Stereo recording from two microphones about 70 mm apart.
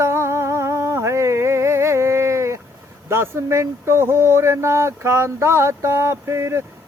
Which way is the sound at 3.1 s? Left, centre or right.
Right.